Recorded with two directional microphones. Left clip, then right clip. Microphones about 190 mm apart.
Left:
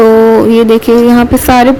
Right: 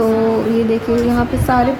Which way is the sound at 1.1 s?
50° left (ahead or behind).